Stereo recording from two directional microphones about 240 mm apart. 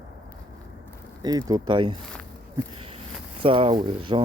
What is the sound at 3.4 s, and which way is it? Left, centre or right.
Speech, right.